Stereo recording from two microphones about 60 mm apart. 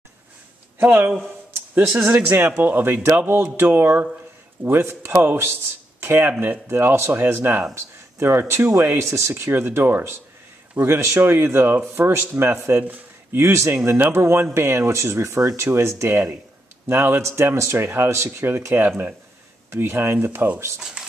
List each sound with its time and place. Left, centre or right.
0.7 s a man's voice: right
1.8 s speech: right
8.7 s speech: right
16.9 s speech: right
18.9 s speech: right